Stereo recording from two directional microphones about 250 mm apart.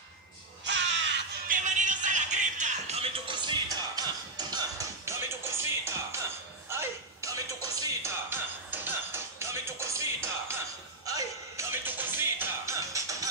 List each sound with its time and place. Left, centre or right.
0.7 s crow: right
1.6 s music: right; by 13.3 s centre